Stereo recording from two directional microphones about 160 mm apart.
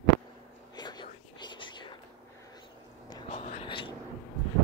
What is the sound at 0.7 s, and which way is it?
Whispering, 25° left (ahead or behind).